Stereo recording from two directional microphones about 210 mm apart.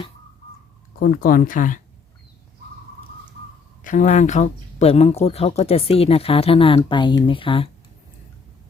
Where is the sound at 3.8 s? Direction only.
35° left (ahead or behind).